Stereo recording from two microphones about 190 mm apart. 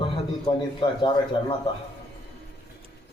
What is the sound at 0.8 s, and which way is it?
Speech, 25° left (ahead or behind).